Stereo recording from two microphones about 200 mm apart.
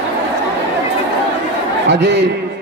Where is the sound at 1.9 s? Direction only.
60° right (ahead or behind).